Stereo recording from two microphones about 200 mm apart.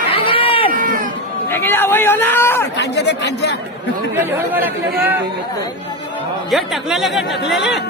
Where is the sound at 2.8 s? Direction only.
60° left (ahead or behind).